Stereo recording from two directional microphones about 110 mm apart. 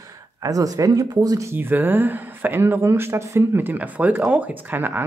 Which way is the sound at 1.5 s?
20° right (ahead or behind).